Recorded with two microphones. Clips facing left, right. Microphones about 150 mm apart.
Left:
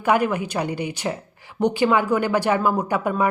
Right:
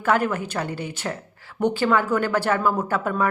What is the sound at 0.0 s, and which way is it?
Speech, 15° left (ahead or behind).